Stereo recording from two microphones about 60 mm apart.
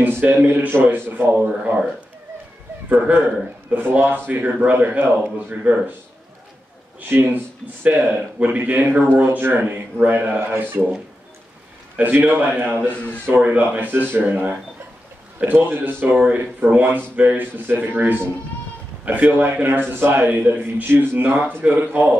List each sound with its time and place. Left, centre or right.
0.0 s a man's voice: right
2.9 s a man's voice: right
7.0 s a man's voice: right
12.0 s a man's voice: right
12.8 s speech: left
13.4 s a man's voice: right
16.2 s a man's voice: right